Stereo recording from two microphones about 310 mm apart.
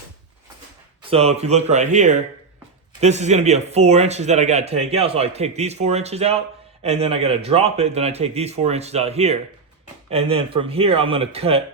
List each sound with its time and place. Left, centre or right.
1.1 s a man's voice: centre